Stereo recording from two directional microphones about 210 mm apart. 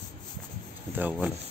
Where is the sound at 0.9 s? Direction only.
5° right (ahead or behind).